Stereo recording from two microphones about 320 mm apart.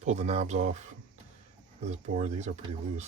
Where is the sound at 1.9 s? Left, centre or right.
Right.